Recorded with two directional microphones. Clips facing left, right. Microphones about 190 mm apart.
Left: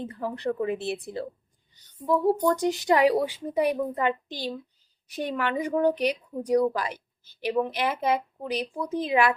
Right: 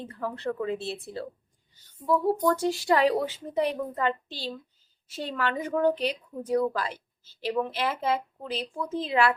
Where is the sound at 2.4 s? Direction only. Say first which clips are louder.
Left 1 dB; 15° left (ahead or behind).